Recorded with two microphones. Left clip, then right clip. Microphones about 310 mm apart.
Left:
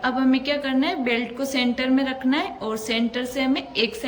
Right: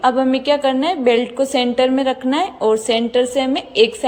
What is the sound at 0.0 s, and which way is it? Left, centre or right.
A woman's voice, centre.